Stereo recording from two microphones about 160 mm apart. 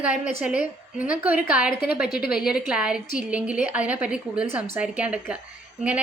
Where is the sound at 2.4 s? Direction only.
5° right (ahead or behind).